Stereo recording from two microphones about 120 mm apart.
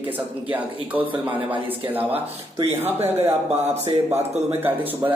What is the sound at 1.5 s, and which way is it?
Speech, 15° right (ahead or behind).